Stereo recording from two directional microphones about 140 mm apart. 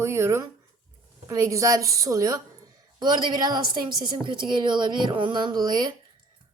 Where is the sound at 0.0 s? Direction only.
20° right (ahead or behind).